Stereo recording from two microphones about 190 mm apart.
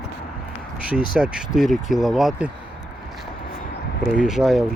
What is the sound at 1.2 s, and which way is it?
Speech, 5° right (ahead or behind).